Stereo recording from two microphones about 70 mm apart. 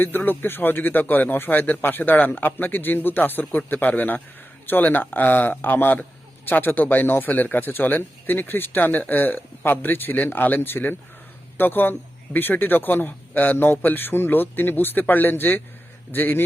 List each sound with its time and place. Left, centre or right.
0.3 s a man's voice: left